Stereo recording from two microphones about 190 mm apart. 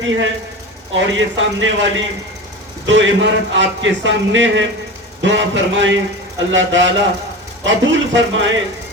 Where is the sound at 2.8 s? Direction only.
75° right (ahead or behind).